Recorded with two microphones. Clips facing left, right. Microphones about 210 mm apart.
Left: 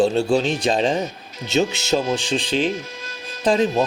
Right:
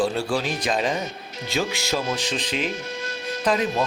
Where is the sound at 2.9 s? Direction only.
70° right (ahead or behind).